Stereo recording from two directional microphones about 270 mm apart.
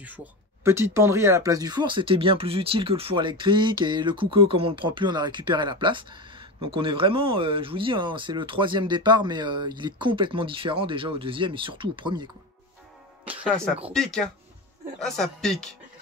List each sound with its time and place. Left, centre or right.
0.7 s speech: centre
15.0 s speech: centre